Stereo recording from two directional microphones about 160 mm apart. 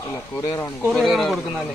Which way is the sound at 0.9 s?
Centre (ahead or behind).